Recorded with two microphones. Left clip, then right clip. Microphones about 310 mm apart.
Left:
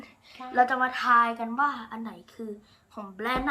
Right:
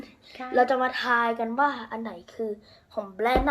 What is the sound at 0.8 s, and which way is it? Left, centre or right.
A woman's voice, centre.